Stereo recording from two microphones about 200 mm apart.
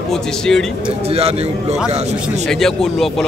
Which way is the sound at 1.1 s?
30° right (ahead or behind).